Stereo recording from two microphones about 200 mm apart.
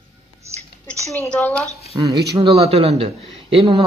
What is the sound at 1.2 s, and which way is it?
Speech, 10° left (ahead or behind).